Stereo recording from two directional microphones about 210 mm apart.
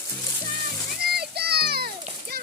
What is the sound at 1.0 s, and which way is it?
Children playing, 50° right (ahead or behind).